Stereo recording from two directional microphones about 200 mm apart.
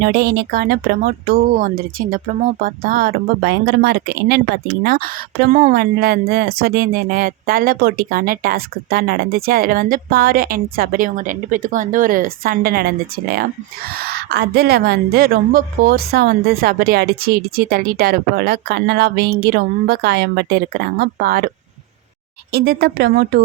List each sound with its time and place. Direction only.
0.0 s speech: 50° right (ahead or behind)
22.5 s speech: 50° right (ahead or behind)